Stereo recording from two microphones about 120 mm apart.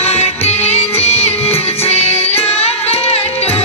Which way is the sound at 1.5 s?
60° left (ahead or behind).